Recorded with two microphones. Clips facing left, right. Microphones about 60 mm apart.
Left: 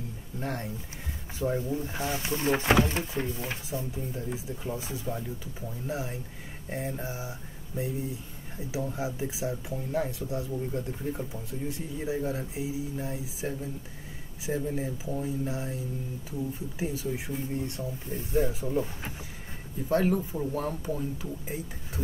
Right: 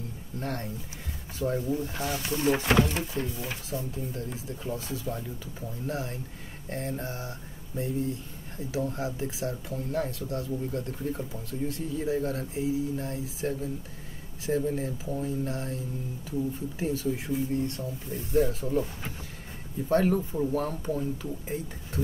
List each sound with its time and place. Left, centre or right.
0.4 s speech: centre
3.0 s speech: centre
3.3 s speech: left
4.1 s speech: centre
19.9 s speech: centre